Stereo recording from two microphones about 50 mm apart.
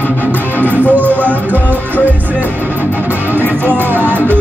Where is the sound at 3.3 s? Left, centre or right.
Right.